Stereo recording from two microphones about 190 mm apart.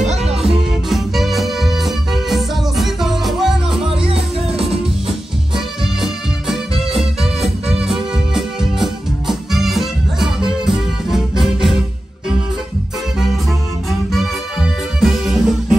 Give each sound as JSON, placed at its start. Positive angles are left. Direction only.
{"t": 0.0, "sound": "music", "side_deg": -35}
{"t": 0.8, "sound": "music", "side_deg": 0}
{"t": 3.8, "sound": "music", "side_deg": -30}
{"t": 5.9, "sound": "music", "side_deg": 0}
{"t": 14.1, "sound": "music", "side_deg": 0}